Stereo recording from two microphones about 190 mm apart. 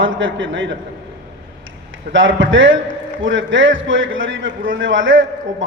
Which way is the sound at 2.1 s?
75° right (ahead or behind).